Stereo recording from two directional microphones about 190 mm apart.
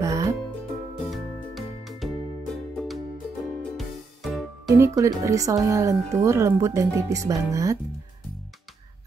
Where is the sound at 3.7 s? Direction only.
Centre (ahead or behind).